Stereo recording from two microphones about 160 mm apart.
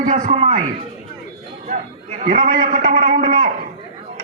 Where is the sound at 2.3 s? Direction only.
60° right (ahead or behind).